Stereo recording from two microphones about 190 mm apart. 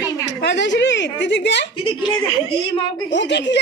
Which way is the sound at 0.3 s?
65° left (ahead or behind).